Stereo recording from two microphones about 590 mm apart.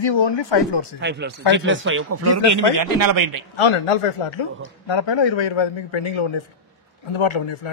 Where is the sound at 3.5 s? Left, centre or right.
Left.